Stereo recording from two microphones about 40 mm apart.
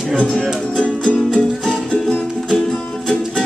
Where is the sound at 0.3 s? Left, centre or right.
Centre.